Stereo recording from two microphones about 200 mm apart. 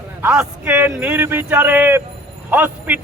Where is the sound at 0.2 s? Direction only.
5° right (ahead or behind).